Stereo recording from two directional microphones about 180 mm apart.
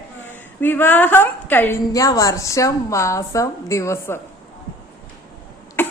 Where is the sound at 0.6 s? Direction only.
10° left (ahead or behind).